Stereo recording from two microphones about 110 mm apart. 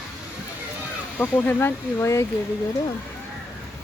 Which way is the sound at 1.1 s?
15° left (ahead or behind).